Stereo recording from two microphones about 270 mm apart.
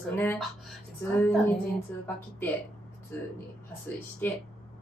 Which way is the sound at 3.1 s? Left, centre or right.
Centre.